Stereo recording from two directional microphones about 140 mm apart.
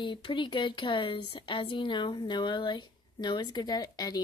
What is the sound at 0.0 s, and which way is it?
A woman's voice, 35° left (ahead or behind).